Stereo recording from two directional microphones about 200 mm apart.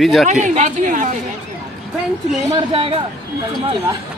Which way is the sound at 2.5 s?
30° right (ahead or behind).